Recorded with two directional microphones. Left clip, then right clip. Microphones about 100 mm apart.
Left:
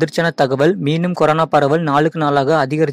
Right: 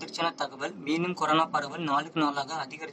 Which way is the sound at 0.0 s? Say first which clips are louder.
Left 15 dB; 45° left (ahead or behind).